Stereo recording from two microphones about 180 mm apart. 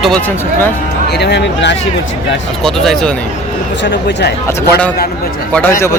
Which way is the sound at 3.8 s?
75° left (ahead or behind).